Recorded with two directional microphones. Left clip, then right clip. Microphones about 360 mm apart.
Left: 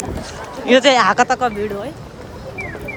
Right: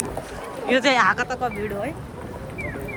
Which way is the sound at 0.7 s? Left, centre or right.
Centre.